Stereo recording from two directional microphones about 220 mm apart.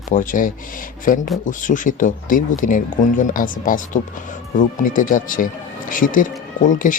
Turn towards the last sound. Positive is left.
turn(degrees=35)  # may be behind; listen again after turning